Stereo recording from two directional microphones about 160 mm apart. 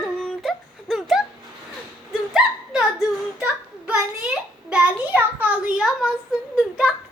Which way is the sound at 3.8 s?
10° right (ahead or behind).